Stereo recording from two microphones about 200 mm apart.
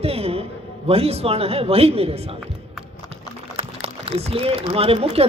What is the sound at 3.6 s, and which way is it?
Speech, 30° right (ahead or behind).